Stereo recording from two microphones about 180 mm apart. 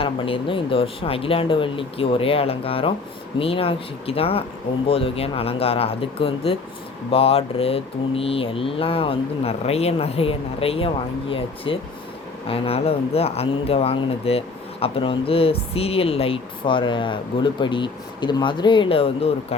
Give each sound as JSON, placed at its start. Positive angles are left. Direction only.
{"t": 0.0, "sound": "speech", "side_deg": 30}